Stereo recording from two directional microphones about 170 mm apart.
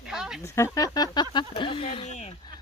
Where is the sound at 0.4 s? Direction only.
15° left (ahead or behind).